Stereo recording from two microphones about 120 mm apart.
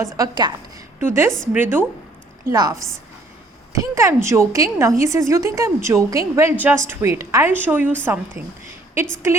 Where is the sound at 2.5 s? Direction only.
30° right (ahead or behind).